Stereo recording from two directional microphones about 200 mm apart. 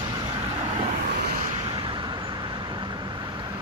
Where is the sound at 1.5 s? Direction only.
25° right (ahead or behind).